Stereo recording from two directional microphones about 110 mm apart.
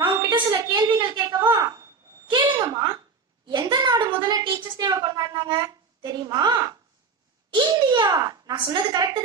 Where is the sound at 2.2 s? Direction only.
40° right (ahead or behind).